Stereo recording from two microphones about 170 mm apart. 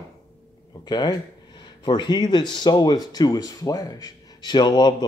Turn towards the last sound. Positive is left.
turn(degrees=25)  # may be behind; listen again after turning